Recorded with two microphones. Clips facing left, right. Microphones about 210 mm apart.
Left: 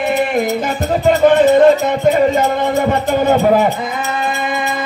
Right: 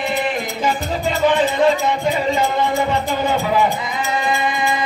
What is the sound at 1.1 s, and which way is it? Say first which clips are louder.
Music: left 8 dB; 50° left (ahead or behind).